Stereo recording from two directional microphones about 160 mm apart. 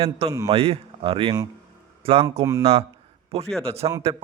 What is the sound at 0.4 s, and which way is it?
Speech, 40° right (ahead or behind).